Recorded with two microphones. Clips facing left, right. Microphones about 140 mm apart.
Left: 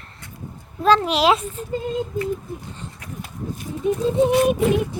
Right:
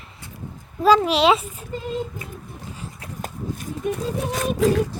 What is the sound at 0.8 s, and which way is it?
Speech, 5° right (ahead or behind).